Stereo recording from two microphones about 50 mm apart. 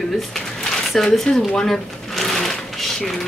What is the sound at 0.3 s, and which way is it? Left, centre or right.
Speech, centre.